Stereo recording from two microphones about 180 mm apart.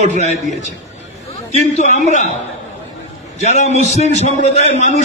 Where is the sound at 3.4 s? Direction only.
40° left (ahead or behind).